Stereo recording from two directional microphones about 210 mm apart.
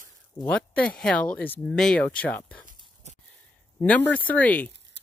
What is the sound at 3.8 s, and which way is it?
Speech, 5° left (ahead or behind).